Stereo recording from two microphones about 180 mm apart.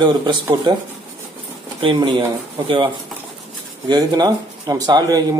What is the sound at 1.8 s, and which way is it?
Speech, 25° right (ahead or behind).